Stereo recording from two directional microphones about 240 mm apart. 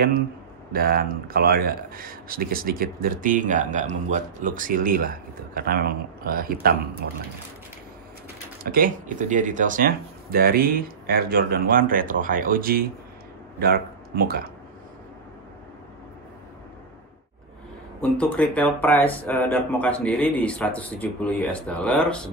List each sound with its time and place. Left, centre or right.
0.7 s speech: right
8.6 s a man's voice: right
18.1 s speech: centre